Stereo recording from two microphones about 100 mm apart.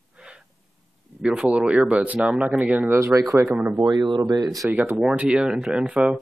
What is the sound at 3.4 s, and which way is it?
Speech, 15° right (ahead or behind).